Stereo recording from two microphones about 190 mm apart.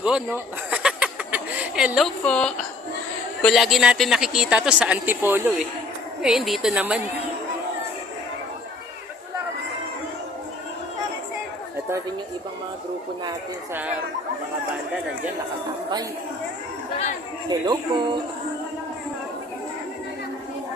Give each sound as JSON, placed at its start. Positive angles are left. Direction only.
{"t": 0.0, "sound": "a sound", "side_deg": -10}
{"t": 2.2, "sound": "a woman's voice", "side_deg": 5}
{"t": 17.5, "sound": "speech", "side_deg": -25}